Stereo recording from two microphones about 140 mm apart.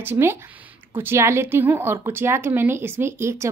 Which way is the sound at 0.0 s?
15° right (ahead or behind).